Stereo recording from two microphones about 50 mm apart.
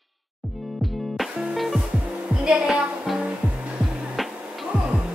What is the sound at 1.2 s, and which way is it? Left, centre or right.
Music, centre.